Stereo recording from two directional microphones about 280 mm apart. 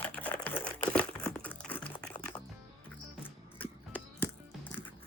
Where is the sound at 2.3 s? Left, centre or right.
Centre.